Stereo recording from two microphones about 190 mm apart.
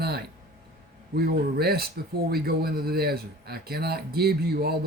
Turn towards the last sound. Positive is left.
turn(degrees=-55)  # may be behind; listen again after turning